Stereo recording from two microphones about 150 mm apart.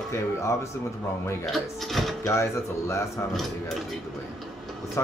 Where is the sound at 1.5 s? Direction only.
Centre (ahead or behind).